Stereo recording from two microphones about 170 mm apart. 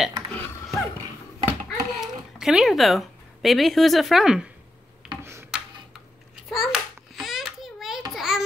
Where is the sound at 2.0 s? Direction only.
5° right (ahead or behind).